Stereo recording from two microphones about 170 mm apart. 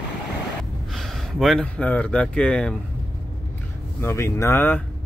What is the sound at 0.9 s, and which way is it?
Speech, centre (ahead or behind).